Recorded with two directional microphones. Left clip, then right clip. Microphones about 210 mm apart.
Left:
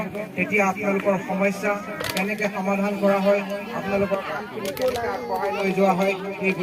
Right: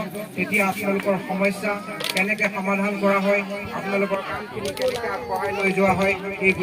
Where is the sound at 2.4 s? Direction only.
Centre (ahead or behind).